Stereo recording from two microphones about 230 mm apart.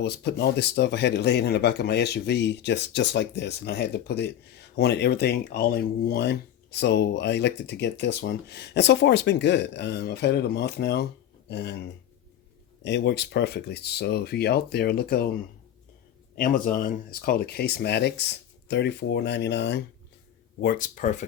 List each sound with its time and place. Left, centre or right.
0.0 s speech: left
12.8 s speech: left
16.4 s speech: left
20.6 s speech: left